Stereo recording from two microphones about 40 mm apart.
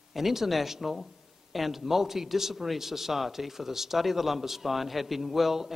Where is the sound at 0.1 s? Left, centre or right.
Centre.